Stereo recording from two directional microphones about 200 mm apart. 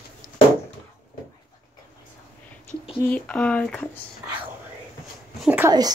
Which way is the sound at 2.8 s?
5° left (ahead or behind).